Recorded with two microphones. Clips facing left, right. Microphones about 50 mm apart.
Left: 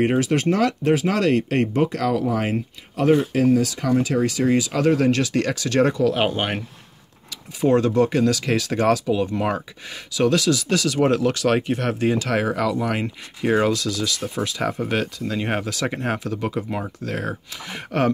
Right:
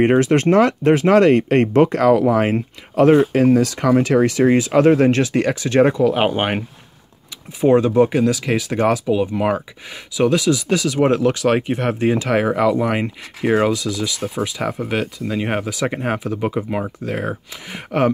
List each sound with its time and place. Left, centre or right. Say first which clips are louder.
0.0 s speech: right 5 dB; right
7.6 s speech: right 4 dB; centre